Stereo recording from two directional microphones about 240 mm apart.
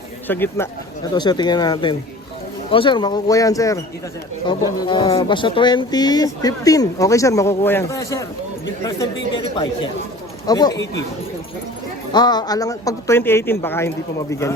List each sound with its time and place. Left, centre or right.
0.3 s speech: centre
12.1 s speech: centre